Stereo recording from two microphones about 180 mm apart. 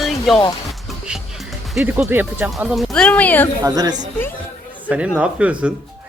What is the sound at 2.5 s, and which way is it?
Speech, centre (ahead or behind).